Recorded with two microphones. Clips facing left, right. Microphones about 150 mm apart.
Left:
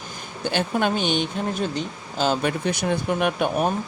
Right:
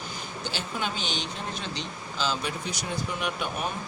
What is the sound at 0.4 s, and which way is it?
Speech, 55° left (ahead or behind).